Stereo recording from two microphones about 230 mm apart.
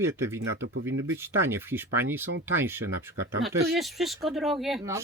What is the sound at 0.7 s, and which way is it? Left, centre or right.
Speech, right.